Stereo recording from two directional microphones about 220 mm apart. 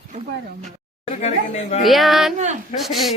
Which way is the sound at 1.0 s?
30° left (ahead or behind).